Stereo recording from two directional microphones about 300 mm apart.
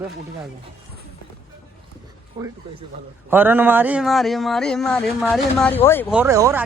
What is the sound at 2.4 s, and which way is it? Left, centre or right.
Speech, centre.